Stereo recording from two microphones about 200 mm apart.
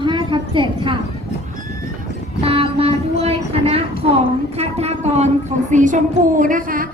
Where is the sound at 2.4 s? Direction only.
30° right (ahead or behind).